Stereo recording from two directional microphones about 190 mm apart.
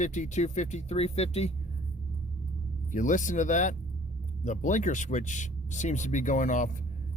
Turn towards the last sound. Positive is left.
turn(degrees=40)  # may be behind; listen again after turning